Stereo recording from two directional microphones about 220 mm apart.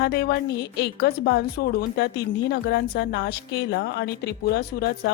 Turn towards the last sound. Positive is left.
turn(degrees=45)  # may be behind; listen again after turning